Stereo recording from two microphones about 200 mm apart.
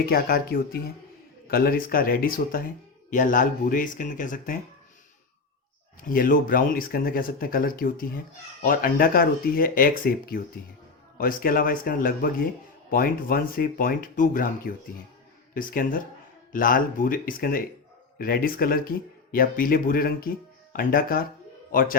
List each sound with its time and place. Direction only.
0.0 s speech: 50° left (ahead or behind)
6.0 s a man's voice: 45° left (ahead or behind)